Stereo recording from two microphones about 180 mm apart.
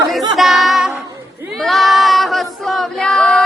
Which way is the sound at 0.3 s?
Centre (ahead or behind).